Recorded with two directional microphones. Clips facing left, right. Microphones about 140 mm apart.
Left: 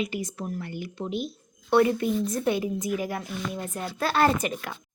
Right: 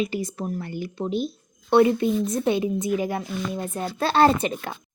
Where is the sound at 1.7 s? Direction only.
25° right (ahead or behind).